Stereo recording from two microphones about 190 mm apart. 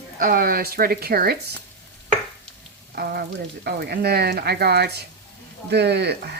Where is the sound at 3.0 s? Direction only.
60° right (ahead or behind).